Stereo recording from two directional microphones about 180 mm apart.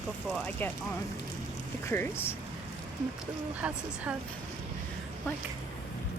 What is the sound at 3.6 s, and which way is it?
Speech, 5° right (ahead or behind).